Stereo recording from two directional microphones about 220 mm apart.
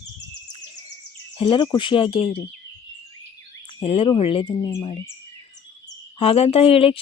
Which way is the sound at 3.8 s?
25° left (ahead or behind).